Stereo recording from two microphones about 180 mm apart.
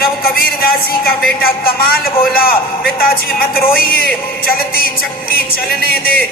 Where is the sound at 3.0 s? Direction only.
55° left (ahead or behind).